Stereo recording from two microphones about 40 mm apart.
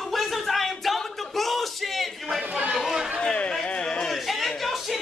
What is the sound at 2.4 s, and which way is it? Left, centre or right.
Chatter, right.